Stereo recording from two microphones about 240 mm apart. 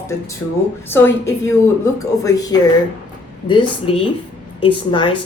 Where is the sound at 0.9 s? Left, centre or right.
Centre.